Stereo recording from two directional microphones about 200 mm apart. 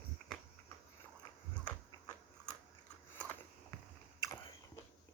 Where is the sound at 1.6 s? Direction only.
20° left (ahead or behind).